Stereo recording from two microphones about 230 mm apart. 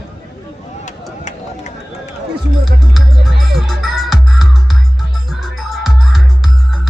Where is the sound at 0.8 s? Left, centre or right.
Left.